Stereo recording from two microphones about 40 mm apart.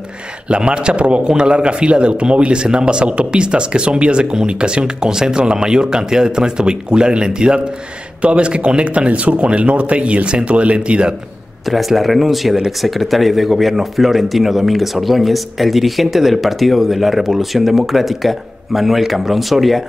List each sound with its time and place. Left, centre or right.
0.5 s speech: right
11.6 s a man's voice: centre